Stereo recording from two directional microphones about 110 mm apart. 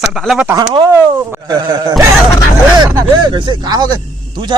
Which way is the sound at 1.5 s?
40° right (ahead or behind).